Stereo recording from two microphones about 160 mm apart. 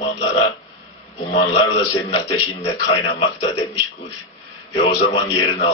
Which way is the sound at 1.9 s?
35° left (ahead or behind).